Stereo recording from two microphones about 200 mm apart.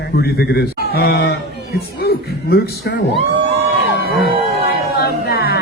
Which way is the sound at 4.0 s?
50° right (ahead or behind).